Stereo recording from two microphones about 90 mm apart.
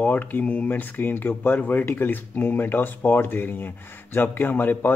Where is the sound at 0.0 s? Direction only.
20° left (ahead or behind).